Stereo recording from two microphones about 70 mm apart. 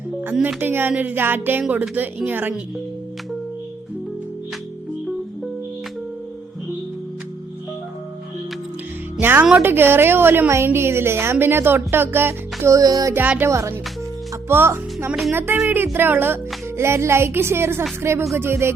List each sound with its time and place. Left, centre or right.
0.4 s music: right
9.2 s music: right
9.6 s a woman's voice: right
12.7 s music: right
13.1 s music: right
13.5 s a woman's voice: right